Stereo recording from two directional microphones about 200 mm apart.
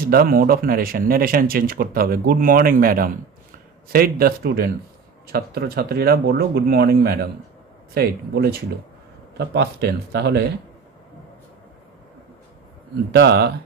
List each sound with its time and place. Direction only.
0.0 s speech: 50° right (ahead or behind)
13.1 s speech: 60° right (ahead or behind)